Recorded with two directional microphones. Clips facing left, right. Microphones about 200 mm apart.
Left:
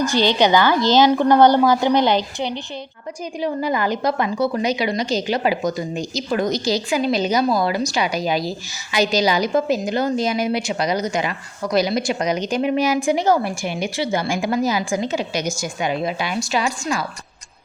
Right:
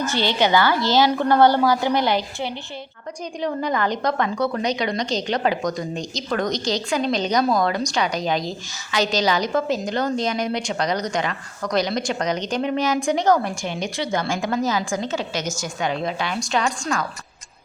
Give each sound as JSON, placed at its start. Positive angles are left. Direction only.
{"t": 0.0, "sound": "a woman's voice", "side_deg": 15}
{"t": 3.4, "sound": "speech", "side_deg": 5}